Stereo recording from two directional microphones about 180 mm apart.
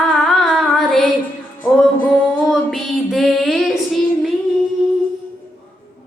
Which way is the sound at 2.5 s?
Centre (ahead or behind).